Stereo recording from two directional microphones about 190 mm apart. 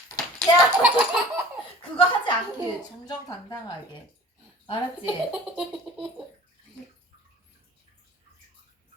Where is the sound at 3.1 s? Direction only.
20° left (ahead or behind).